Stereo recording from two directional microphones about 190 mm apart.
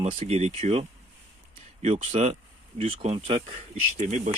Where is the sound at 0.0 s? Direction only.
35° right (ahead or behind).